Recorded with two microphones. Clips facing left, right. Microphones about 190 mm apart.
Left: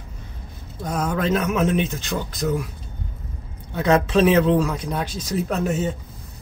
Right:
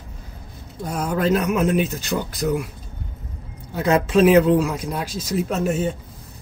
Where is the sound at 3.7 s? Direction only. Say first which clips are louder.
Even; 5° right (ahead or behind).